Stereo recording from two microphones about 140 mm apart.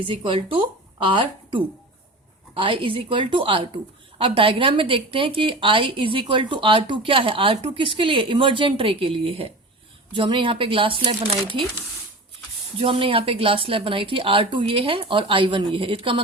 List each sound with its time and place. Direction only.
0.0 s speech: 40° right (ahead or behind)
12.8 s speech: 40° right (ahead or behind)